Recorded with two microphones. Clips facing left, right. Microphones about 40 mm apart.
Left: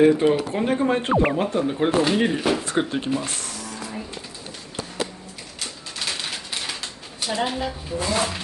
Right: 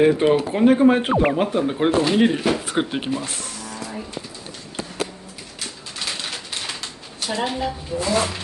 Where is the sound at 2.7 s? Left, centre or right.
Right.